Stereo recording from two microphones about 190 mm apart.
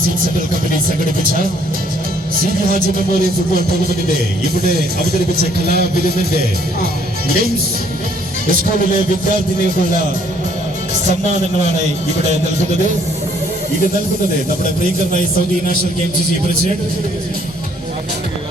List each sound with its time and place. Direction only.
1.2 s speech: 50° right (ahead or behind)
4.1 s speech: 55° right (ahead or behind)